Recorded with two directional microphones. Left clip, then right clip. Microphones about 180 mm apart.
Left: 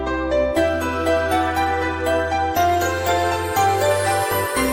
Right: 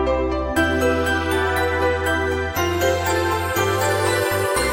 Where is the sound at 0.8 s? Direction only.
Centre (ahead or behind).